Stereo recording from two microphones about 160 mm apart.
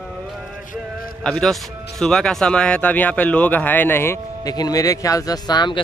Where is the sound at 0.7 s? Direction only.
65° left (ahead or behind).